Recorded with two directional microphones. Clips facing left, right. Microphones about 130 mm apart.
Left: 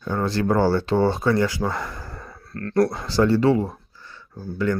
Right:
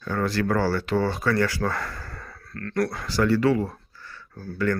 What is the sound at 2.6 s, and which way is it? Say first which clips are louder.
Speech: left 6 dB; 30° left (ahead or behind).